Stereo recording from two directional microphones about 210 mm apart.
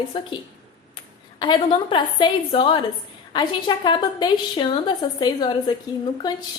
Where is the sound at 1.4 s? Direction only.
20° left (ahead or behind).